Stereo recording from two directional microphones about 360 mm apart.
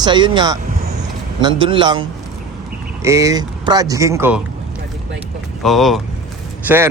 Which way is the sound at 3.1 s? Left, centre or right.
Centre.